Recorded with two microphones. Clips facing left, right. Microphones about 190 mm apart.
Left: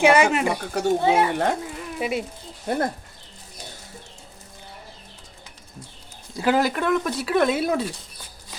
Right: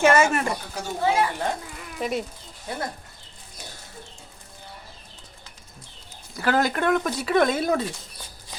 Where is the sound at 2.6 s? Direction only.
50° left (ahead or behind).